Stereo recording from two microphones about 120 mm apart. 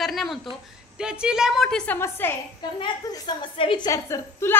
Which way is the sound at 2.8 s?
40° left (ahead or behind).